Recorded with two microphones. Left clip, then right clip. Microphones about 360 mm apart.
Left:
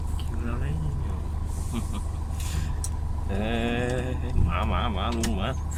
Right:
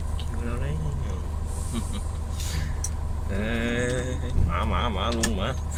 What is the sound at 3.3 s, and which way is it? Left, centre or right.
Speech, centre.